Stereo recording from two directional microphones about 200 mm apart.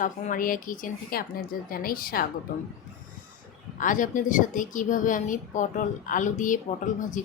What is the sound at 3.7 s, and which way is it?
A woman's voice, 40° left (ahead or behind).